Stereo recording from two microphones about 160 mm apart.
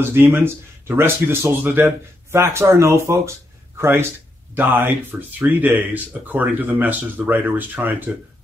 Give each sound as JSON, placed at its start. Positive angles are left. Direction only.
{"t": 0.1, "sound": "speech", "side_deg": -15}